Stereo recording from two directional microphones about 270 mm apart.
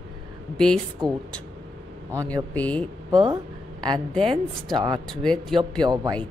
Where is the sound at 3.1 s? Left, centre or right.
Centre.